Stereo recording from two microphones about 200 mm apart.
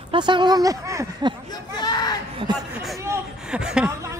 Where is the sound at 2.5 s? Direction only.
20° right (ahead or behind).